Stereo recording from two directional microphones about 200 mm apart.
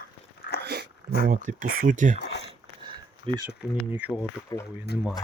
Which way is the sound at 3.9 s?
10° right (ahead or behind).